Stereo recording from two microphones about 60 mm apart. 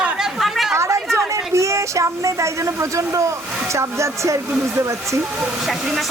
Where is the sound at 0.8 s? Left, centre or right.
Right.